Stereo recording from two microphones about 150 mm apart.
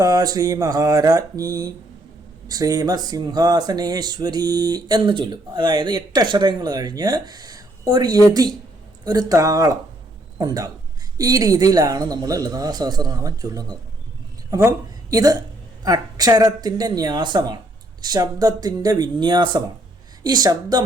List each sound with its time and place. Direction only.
0.0 s a man's voice: 25° right (ahead or behind)